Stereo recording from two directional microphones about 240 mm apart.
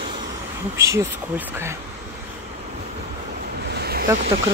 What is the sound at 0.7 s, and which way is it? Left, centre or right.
A woman's voice, centre.